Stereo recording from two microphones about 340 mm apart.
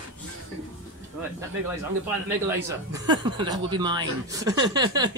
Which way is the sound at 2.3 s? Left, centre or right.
Centre.